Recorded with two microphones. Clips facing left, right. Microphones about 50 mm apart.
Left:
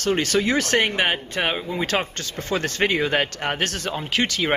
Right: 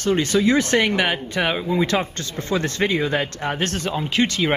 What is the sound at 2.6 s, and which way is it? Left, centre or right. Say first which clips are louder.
Speech: even; left.